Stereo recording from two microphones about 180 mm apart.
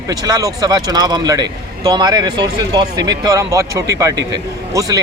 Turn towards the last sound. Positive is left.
turn(degrees=-20)  # may be behind; listen again after turning